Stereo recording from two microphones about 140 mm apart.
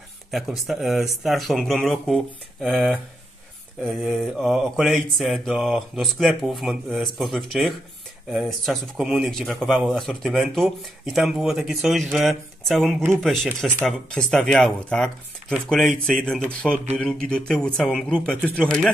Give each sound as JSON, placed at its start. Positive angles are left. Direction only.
{"t": 0.3, "sound": "mantra", "side_deg": 0}
{"t": 18.0, "sound": "speech", "side_deg": 5}